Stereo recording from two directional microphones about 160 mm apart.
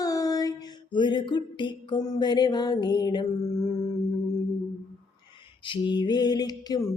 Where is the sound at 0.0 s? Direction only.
20° left (ahead or behind).